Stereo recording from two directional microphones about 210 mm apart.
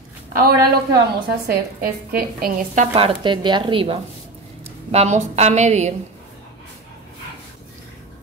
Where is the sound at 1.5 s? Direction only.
45° right (ahead or behind).